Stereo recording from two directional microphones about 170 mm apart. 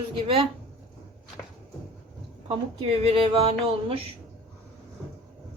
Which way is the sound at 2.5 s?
35° right (ahead or behind).